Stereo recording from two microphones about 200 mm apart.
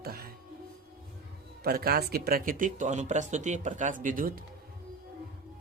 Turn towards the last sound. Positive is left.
turn(degrees=-45)  # may be behind; listen again after turning